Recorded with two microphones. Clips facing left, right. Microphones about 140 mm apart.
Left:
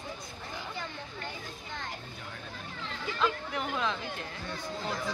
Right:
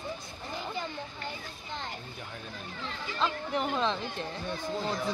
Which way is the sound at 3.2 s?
30° right (ahead or behind).